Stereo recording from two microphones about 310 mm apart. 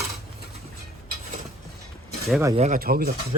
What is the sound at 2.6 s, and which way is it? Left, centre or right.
Speech, right.